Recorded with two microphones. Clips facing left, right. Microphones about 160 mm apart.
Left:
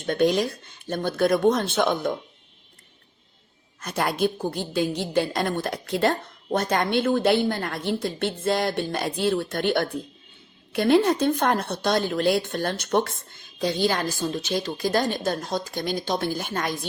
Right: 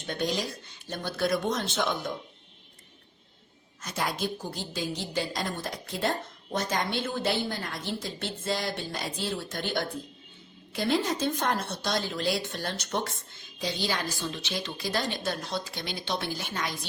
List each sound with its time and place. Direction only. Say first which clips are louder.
0.0 s a woman's voice: left 9 dB; 55° left (ahead or behind)
3.8 s a woman's voice: left 7 dB; 60° left (ahead or behind)